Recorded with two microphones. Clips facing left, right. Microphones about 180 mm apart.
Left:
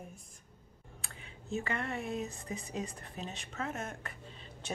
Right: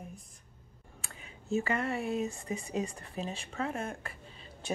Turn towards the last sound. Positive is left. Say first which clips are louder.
# right 4 dB
turn(degrees=-30)  # may be behind; listen again after turning